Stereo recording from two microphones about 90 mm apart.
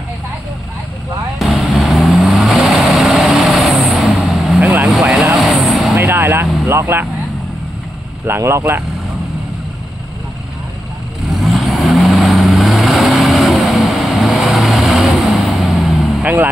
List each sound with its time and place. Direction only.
1.4 s vehicle: centre (ahead or behind)
5.9 s vehicle: 25° right (ahead or behind)
8.3 s speech: 30° right (ahead or behind)
11.2 s vehicle: centre (ahead or behind)